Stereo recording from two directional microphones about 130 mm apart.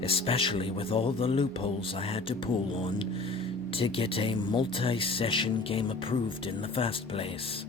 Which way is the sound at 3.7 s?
45° left (ahead or behind).